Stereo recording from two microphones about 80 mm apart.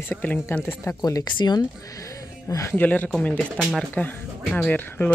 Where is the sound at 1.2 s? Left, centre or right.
Left.